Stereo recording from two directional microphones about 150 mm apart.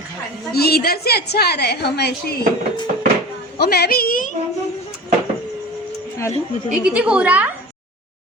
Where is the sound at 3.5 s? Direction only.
90° left; by 4.3 s 70° left (ahead or behind).